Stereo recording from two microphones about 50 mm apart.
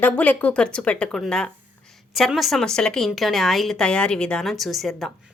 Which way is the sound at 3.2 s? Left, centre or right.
Centre.